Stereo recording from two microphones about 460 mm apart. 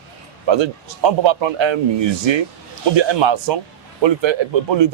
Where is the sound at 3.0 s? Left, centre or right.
Right.